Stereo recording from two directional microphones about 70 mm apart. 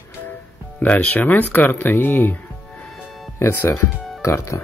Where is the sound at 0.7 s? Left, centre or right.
Left.